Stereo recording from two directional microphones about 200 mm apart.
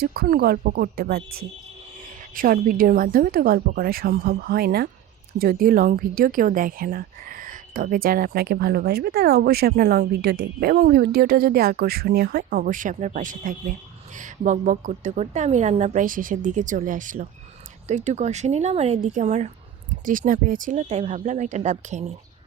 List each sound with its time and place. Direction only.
0.0 s a woman's voice: 50° right (ahead or behind)